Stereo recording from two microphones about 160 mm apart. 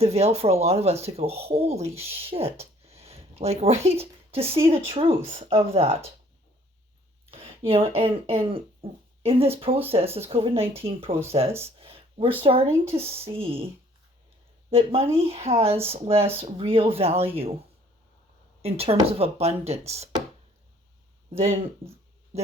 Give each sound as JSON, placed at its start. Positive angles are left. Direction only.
{"t": 0.0, "sound": "speech", "side_deg": -40}
{"t": 7.3, "sound": "speech", "side_deg": -35}
{"t": 11.8, "sound": "a sound", "side_deg": -35}
{"t": 12.4, "sound": "speech", "side_deg": -35}
{"t": 14.7, "sound": "speech", "side_deg": -35}
{"t": 16.1, "sound": "speech", "side_deg": -15}
{"t": 16.4, "sound": "speech", "side_deg": -35}
{"t": 18.6, "sound": "speech", "side_deg": -40}
{"t": 21.8, "sound": "speech", "side_deg": -35}